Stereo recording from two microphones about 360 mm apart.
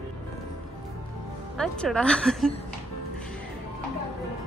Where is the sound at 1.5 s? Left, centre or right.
Centre.